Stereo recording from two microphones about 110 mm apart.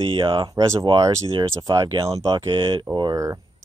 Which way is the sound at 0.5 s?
35° right (ahead or behind).